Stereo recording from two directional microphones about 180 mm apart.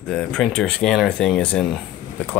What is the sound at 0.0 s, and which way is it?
Speech, 5° left (ahead or behind).